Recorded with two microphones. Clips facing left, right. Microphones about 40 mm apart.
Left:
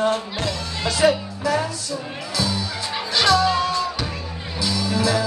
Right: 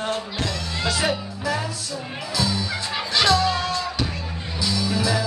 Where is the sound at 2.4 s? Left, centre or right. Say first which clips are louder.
Even; centre.